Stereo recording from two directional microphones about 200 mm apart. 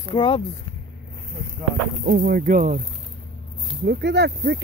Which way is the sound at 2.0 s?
50° right (ahead or behind).